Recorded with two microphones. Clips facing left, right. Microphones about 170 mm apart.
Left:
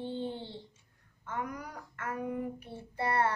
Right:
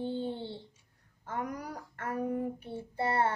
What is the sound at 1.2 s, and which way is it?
Female singing, 35° right (ahead or behind).